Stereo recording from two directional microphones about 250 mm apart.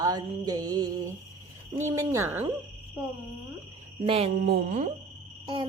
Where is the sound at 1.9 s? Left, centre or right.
Centre.